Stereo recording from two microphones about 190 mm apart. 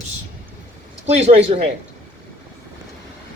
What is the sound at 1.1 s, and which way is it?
Speech, 35° right (ahead or behind).